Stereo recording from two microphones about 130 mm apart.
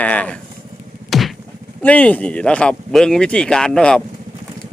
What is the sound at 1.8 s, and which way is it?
Speech, 10° left (ahead or behind).